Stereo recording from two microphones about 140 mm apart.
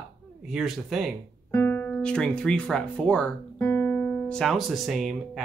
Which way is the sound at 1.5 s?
15° left (ahead or behind).